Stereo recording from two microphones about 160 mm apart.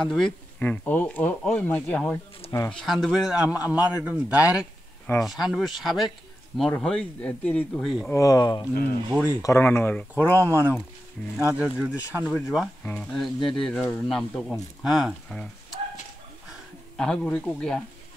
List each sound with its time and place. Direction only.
0.0 s a man's voice: 5° left (ahead or behind)
8.1 s speech: 20° left (ahead or behind)
10.1 s a man's voice: 15° right (ahead or behind); by 15.4 s centre (ahead or behind)
16.9 s speech: 5° left (ahead or behind)